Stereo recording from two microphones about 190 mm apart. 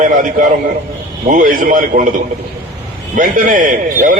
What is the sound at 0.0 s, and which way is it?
A man's voice, 45° right (ahead or behind).